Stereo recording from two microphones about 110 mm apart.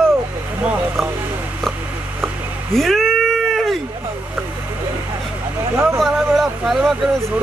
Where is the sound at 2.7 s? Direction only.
Centre (ahead or behind).